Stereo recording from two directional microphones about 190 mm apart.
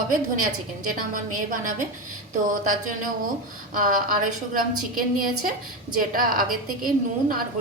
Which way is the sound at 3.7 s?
45° right (ahead or behind).